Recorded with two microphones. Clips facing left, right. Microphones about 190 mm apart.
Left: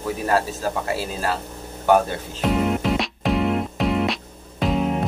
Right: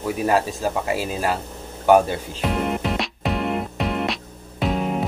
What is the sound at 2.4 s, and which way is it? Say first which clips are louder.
Music: left 3 dB; centre (ahead or behind).